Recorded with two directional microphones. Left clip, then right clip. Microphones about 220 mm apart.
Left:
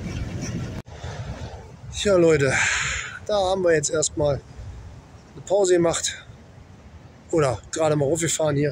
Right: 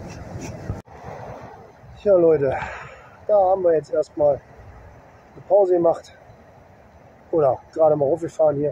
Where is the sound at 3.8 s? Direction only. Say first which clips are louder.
Right 2 dB; 5° left (ahead or behind).